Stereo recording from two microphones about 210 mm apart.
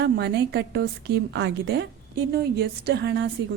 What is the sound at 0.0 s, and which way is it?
A woman's voice, 50° right (ahead or behind).